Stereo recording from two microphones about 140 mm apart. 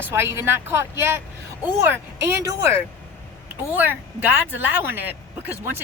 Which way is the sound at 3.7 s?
15° right (ahead or behind).